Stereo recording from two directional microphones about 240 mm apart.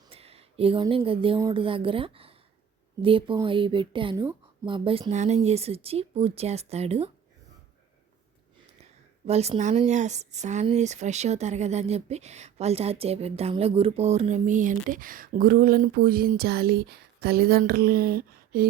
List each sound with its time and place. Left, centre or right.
0.1 s speech: right
9.2 s speech: right